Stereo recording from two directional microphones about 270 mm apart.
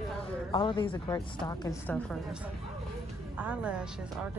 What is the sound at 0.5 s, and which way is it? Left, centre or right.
A woman's voice, centre.